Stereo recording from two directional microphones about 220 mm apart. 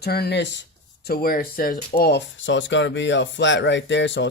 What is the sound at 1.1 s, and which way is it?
Speech, 40° left (ahead or behind).